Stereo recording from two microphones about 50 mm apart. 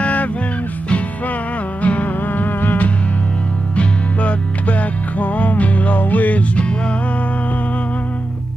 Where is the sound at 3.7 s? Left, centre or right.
Left.